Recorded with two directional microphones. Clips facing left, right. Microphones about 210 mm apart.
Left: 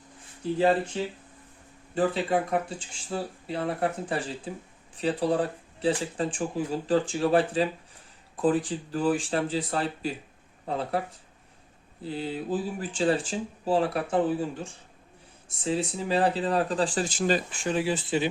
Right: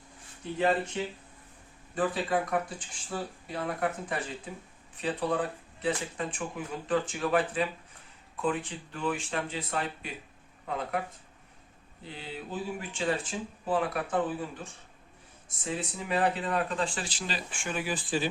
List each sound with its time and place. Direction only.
0.9 s speech: 30° left (ahead or behind)
12.0 s speech: 35° left (ahead or behind)